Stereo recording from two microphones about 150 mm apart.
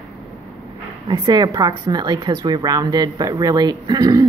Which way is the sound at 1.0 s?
30° right (ahead or behind).